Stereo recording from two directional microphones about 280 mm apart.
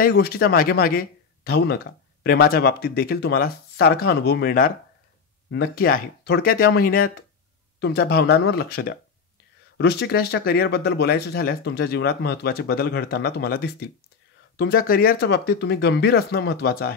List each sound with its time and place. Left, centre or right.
0.0 s speech: left